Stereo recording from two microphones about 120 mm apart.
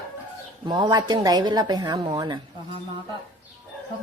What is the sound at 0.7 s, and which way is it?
A woman's voice, 35° right (ahead or behind).